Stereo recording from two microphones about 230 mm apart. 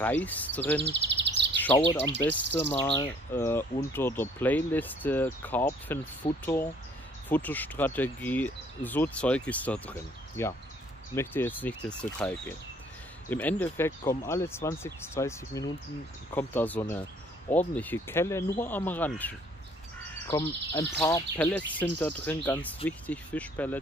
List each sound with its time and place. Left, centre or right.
0.0 s speech: centre
0.8 s bird vocalization: right
2.5 s speech: centre